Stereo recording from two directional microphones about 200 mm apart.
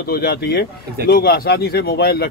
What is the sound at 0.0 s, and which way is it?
Speech, 50° left (ahead or behind).